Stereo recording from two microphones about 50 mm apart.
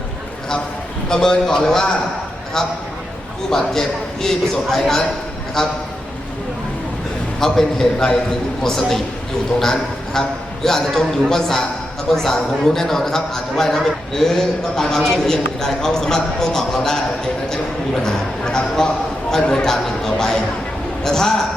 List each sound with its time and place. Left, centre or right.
1.1 s a man's voice: centre
7.3 s a man's voice: centre
8.6 s a man's voice: centre
10.2 s a man's voice: centre
18.0 s a man's voice: centre